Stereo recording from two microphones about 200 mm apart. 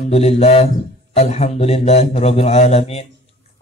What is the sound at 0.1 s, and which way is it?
Mantra, 30° left (ahead or behind).